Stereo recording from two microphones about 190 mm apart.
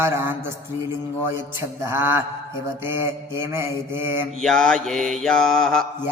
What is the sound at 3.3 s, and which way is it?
Mantra, 15° right (ahead or behind).